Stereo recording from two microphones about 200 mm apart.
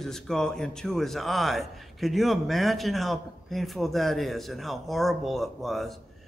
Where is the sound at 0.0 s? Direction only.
Centre (ahead or behind).